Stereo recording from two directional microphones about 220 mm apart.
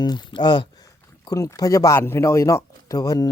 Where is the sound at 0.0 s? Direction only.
20° left (ahead or behind).